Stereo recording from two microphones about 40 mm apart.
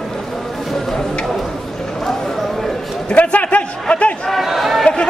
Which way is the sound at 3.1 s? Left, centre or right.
Left.